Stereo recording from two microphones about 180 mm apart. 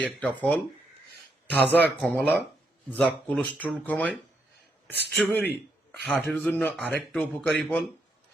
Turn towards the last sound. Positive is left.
turn(degrees=5)  # may be behind; listen again after turning